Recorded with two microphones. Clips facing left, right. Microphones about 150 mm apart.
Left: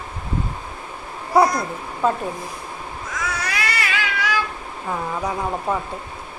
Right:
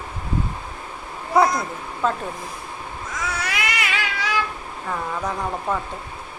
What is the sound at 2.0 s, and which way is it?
Speech, 10° left (ahead or behind).